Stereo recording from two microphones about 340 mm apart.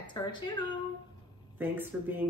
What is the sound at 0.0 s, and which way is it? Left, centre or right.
Speech, centre.